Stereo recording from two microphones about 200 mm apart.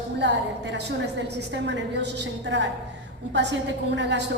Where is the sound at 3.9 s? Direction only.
65° right (ahead or behind).